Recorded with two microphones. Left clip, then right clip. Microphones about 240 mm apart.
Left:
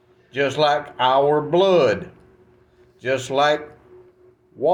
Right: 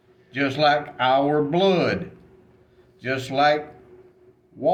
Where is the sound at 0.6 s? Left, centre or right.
Centre.